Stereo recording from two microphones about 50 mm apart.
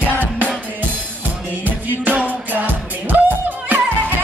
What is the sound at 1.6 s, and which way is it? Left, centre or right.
Music, right.